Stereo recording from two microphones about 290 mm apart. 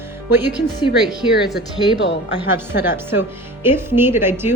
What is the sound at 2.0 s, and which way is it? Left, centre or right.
Speech, left.